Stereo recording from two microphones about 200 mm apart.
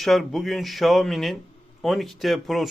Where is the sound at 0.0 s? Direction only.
Centre (ahead or behind).